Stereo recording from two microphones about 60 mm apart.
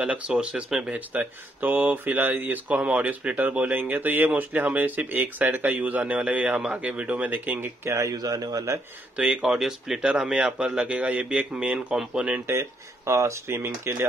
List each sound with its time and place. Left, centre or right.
0.0 s speech: centre
0.7 s speech: centre
0.9 s speech: right
7.6 s speech: right
8.3 s a man's voice: right
9.1 s speech: centre
9.5 s speech: centre; by 12.4 s right
12.4 s speech: right